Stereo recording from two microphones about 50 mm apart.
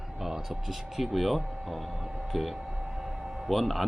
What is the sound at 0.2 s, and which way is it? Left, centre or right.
A man's voice, centre.